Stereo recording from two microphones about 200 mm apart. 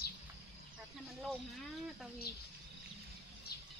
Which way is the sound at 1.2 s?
Centre (ahead or behind).